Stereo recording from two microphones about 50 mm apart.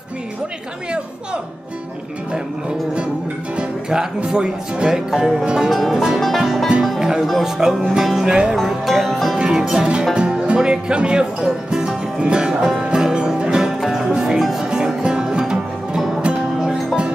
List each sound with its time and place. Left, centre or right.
3.5 s speech: centre
5.4 s music: centre
5.7 s music: centre
7.0 s music: centre
7.4 s speech: centre
8.6 s music: centre
9.4 s speech: centre
12.8 s music: centre
16.5 s music: centre